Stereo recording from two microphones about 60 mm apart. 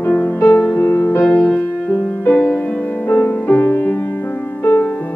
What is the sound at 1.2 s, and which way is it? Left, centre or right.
Music, centre.